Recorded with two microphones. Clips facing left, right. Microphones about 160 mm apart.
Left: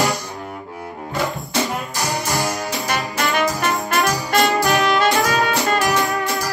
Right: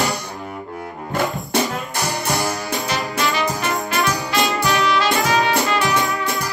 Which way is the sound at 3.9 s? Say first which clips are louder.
Left 3 dB; 55° left (ahead or behind).